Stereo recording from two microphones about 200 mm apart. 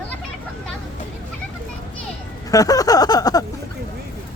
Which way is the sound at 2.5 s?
15° left (ahead or behind).